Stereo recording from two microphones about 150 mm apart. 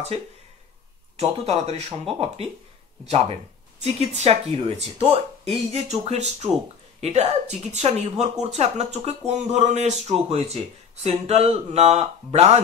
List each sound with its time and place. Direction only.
1.1 s speech: 45° right (ahead or behind)
3.8 s speech: 45° right (ahead or behind)